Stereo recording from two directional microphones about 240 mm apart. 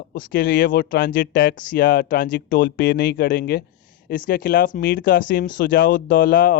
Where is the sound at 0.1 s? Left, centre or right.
Left.